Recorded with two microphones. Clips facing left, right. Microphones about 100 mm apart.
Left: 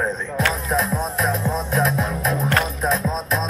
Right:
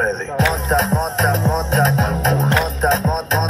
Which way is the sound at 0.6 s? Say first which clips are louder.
Right 4 dB; 90° right.